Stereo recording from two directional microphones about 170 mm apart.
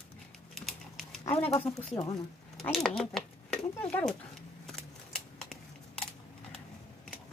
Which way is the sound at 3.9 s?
10° left (ahead or behind).